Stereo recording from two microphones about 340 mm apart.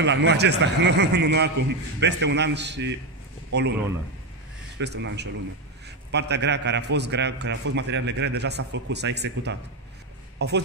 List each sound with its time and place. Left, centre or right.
0.0 s a man's voice: right
4.7 s a man's voice: right